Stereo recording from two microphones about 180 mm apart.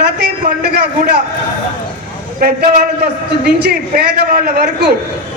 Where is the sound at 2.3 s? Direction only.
55° right (ahead or behind).